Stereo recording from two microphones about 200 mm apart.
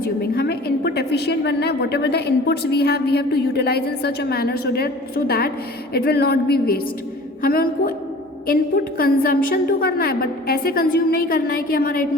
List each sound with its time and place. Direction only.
0.2 s a woman's voice: 55° left (ahead or behind)